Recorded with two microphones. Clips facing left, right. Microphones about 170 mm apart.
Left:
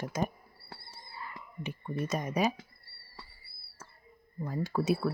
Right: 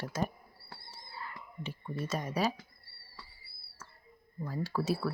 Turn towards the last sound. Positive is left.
turn(degrees=20)  # may be behind; listen again after turning